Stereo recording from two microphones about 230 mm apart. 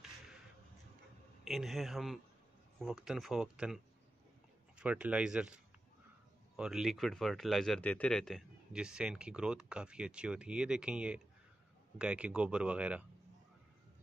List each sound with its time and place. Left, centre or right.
1.4 s speech: centre